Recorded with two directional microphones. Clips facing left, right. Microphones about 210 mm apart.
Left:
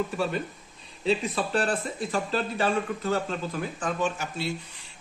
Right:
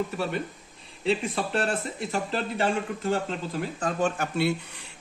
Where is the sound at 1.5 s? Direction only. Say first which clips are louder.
Left 2 dB; 25° right (ahead or behind).